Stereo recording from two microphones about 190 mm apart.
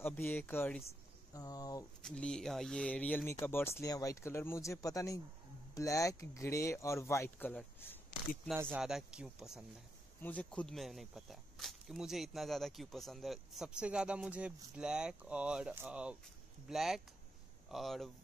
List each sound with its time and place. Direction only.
0.0 s speech: 10° left (ahead or behind)
2.0 s speech: 5° left (ahead or behind)
8.5 s speech: 5° right (ahead or behind)